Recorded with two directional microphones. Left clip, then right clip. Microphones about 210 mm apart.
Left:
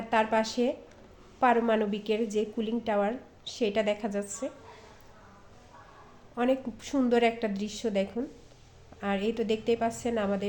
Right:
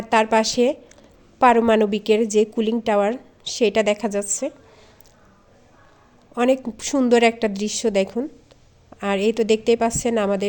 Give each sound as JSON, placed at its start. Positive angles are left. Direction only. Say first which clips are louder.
{"t": 0.1, "sound": "a woman's voice", "louder": "right 9 dB", "side_deg": -50}
{"t": 6.3, "sound": "a woman's voice", "louder": "right 9 dB", "side_deg": -50}